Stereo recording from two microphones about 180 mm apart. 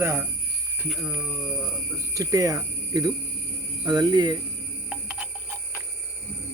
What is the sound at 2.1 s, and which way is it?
Speech, 20° right (ahead or behind).